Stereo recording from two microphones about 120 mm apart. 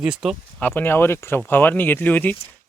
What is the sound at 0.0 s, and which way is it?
Speech, 5° right (ahead or behind).